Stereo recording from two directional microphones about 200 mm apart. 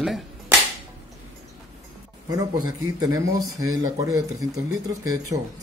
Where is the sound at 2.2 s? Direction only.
20° right (ahead or behind).